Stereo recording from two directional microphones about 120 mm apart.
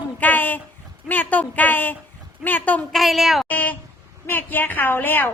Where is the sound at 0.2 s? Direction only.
15° left (ahead or behind).